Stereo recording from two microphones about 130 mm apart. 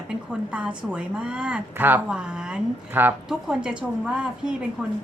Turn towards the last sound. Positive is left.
turn(degrees=-5)  # may be behind; listen again after turning